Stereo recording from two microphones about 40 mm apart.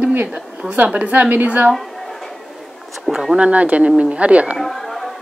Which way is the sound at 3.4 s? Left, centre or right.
Right.